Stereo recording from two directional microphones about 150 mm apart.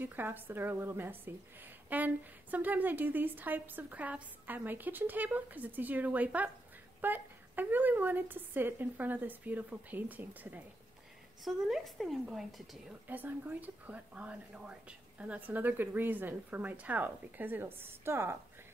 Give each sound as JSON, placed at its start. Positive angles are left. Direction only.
{"t": 0.0, "sound": "a woman's voice", "side_deg": -15}
{"t": 11.4, "sound": "speech", "side_deg": 0}
{"t": 13.1, "sound": "a woman's voice", "side_deg": -10}